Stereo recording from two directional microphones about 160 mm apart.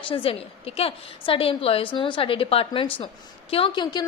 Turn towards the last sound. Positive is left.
turn(degrees=30)  # may be behind; listen again after turning